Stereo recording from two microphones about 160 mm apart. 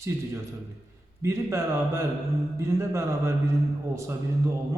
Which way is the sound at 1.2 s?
15° right (ahead or behind).